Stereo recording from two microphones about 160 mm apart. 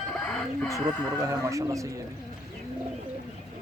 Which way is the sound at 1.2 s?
20° right (ahead or behind).